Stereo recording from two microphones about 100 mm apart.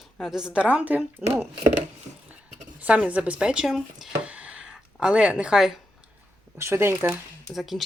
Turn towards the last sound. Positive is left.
turn(degrees=0)  # may be behind; listen again after turning